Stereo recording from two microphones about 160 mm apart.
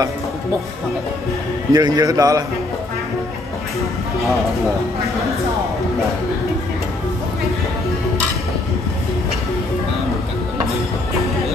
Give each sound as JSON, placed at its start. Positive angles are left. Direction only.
{"t": 1.7, "sound": "a man's voice", "side_deg": -25}